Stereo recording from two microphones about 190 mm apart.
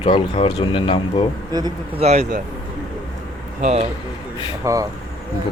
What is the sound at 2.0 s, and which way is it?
Speech, 35° right (ahead or behind).